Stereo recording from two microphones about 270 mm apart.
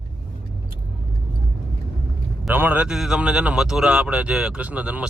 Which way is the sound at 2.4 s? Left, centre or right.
Centre.